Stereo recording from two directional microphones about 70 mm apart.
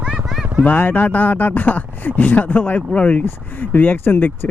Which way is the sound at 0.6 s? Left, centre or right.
Left.